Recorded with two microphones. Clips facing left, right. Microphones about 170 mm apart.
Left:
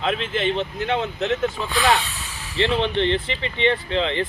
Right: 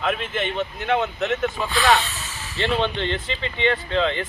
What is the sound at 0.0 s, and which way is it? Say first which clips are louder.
Speech: left 2 dB; 30° left (ahead or behind).